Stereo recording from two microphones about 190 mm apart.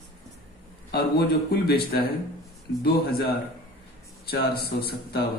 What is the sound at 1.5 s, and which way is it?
A man's voice, 50° left (ahead or behind).